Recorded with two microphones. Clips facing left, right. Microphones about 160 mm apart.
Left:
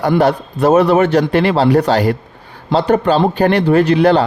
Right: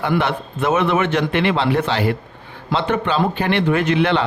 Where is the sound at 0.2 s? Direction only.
40° left (ahead or behind).